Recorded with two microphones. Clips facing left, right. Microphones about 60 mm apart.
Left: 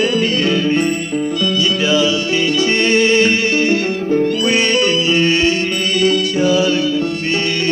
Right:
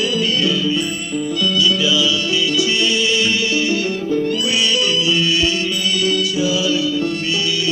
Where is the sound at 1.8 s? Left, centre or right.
Left.